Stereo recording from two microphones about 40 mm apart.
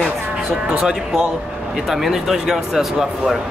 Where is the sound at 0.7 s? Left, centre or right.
Centre.